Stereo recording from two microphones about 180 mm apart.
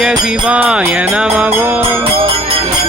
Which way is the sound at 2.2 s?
30° right (ahead or behind).